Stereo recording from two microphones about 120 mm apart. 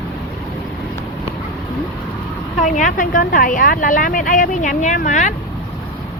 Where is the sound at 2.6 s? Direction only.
90° left.